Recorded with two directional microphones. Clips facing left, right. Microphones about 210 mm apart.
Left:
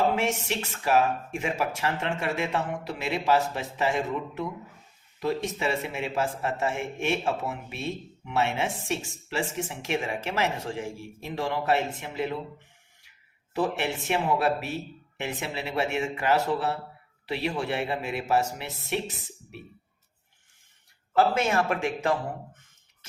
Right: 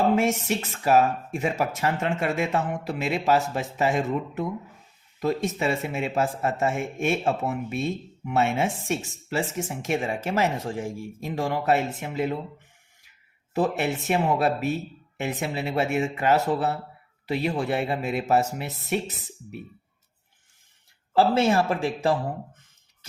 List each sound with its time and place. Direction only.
0.2 s speech: 45° right (ahead or behind)
14.1 s speech: 45° right (ahead or behind)
21.2 s a man's voice: 30° right (ahead or behind)